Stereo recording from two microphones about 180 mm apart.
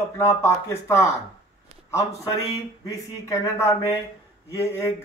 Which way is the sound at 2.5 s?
20° left (ahead or behind).